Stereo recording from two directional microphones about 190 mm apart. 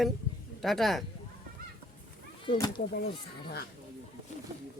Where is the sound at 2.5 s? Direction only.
20° left (ahead or behind).